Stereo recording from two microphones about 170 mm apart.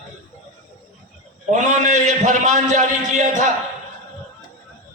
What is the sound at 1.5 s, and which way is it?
A man's voice, 45° right (ahead or behind).